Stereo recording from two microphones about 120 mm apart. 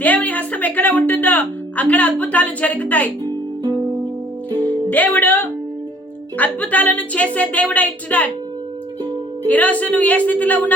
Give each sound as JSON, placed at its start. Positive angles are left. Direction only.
{"t": 0.0, "sound": "speech", "side_deg": 15}
{"t": 3.2, "sound": "music", "side_deg": -35}
{"t": 4.5, "sound": "music", "side_deg": 15}
{"t": 6.3, "sound": "speech", "side_deg": 10}
{"t": 9.5, "sound": "speech", "side_deg": 15}